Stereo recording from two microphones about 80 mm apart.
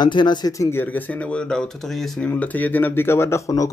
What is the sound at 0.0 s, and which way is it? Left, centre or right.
Speech, left.